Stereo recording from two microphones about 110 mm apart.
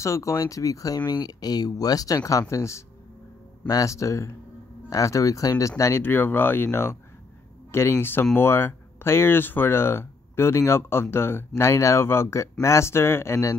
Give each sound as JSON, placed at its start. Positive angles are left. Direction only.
{"t": 0.0, "sound": "speech", "side_deg": 30}